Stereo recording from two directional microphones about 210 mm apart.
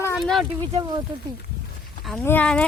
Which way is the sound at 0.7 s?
20° right (ahead or behind).